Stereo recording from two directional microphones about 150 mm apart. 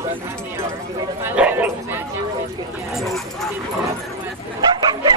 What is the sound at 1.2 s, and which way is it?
Bow-wow, 10° right (ahead or behind).